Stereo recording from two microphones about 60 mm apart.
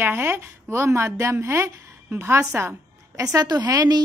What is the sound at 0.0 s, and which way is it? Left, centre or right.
A woman's voice, right.